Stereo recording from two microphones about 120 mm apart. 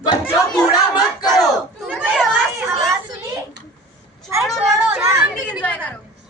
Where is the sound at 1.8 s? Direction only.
Centre (ahead or behind).